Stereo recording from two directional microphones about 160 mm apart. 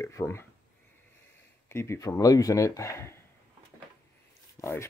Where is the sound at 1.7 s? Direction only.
15° left (ahead or behind).